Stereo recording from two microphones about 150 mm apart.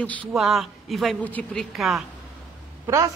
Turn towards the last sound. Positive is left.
turn(degrees=-20)  # may be behind; listen again after turning